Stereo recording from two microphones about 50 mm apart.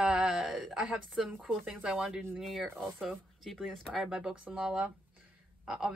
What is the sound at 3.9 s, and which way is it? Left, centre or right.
Speech, centre.